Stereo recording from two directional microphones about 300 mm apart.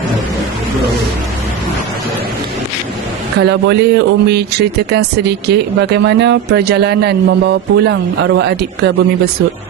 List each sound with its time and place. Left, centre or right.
3.3 s speech: right